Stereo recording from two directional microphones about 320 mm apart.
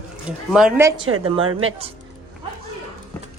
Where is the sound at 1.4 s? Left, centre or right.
Right.